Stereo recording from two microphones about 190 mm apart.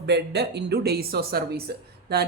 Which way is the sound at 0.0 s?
60° right (ahead or behind).